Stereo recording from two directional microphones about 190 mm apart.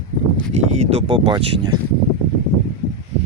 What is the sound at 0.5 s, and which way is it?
Speech, 30° right (ahead or behind).